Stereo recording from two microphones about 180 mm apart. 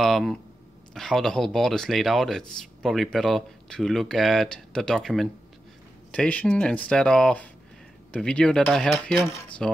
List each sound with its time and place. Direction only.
0.0 s speech: centre (ahead or behind)
9.2 s cutlery: 15° left (ahead or behind)